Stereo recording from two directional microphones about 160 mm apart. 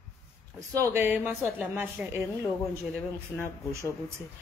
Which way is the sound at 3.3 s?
20° right (ahead or behind).